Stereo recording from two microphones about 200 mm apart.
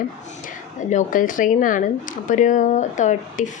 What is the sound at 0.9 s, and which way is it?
Speech, 40° left (ahead or behind).